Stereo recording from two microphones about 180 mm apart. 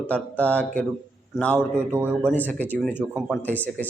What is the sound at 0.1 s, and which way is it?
Speech, 10° left (ahead or behind).